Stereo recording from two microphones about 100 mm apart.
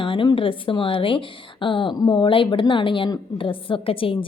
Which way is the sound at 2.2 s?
55° left (ahead or behind).